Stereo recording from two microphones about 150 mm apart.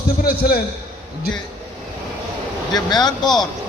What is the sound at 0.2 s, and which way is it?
Speech, 80° left.